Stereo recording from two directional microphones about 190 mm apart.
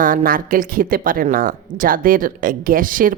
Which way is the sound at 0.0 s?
45° right (ahead or behind).